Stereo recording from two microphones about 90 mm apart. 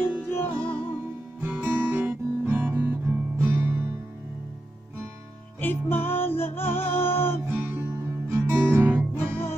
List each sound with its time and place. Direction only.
0.0 s music: 25° left (ahead or behind)
1.4 s music: 20° right (ahead or behind)
5.6 s music: 25° left (ahead or behind)
7.4 s music: 30° right (ahead or behind)